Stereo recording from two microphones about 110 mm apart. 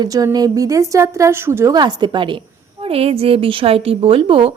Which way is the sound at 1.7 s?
40° right (ahead or behind).